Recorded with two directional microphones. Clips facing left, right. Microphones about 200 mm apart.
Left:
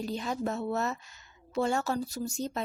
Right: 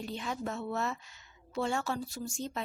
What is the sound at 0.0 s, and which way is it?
A woman's voice, 40° left (ahead or behind).